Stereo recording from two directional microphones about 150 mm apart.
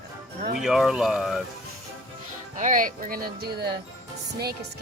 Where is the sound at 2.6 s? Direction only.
60° right (ahead or behind).